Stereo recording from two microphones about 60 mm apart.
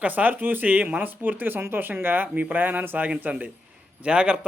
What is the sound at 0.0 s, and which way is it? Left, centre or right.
Speech, right.